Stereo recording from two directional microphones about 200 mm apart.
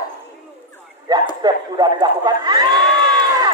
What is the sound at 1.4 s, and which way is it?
A man's voice, 20° right (ahead or behind).